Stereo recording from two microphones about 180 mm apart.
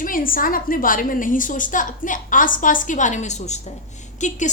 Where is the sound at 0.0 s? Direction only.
50° left (ahead or behind).